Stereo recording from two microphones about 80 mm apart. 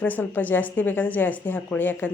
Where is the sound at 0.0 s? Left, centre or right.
Left.